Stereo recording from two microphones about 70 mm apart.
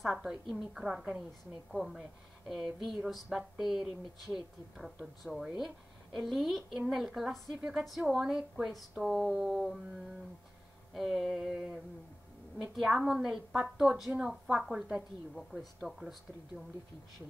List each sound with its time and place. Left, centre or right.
0.0 s a woman's voice: centre
10.9 s speech: centre
11.5 s a woman's voice: centre
12.7 s a woman's voice: centre